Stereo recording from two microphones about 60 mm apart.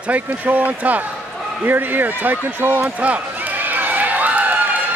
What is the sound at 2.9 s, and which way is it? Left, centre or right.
Run, right.